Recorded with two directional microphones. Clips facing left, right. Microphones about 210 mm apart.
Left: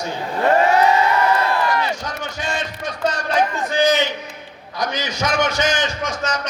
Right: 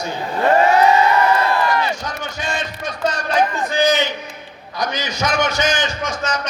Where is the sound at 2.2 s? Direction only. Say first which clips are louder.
Even; 30° left (ahead or behind).